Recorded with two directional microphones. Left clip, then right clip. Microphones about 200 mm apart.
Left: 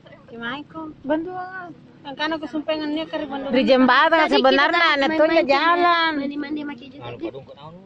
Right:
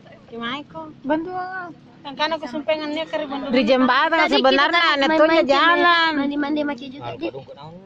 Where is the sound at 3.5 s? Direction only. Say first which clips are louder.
Left 1 dB; 5° left (ahead or behind).